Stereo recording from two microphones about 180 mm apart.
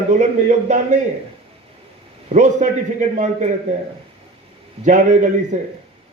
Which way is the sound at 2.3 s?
40° right (ahead or behind).